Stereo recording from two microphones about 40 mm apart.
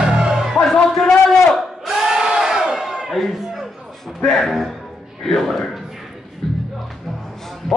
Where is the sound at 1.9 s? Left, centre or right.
Centre.